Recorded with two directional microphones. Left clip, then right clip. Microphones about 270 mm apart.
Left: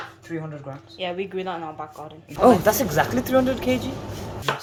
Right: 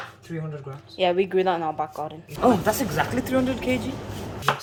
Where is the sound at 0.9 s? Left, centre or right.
Centre.